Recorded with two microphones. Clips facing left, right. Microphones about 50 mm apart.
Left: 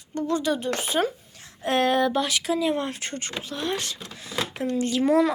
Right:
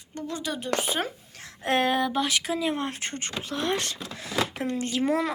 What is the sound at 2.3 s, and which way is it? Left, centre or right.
Speech, right.